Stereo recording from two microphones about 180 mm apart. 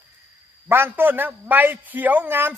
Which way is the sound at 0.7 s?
10° right (ahead or behind).